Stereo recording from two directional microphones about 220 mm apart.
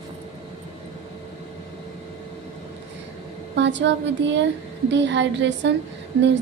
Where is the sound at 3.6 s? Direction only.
55° right (ahead or behind).